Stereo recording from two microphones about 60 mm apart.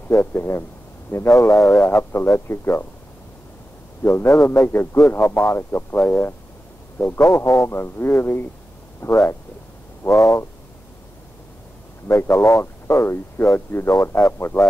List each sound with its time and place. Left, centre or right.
0.1 s speech: left
1.4 s speech: left
1.7 s speech: left
4.0 s speech: left
7.0 s speech: left
10.1 s speech: left
12.1 s speech: left